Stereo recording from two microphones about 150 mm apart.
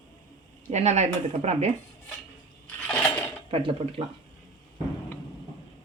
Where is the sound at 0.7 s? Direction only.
50° right (ahead or behind).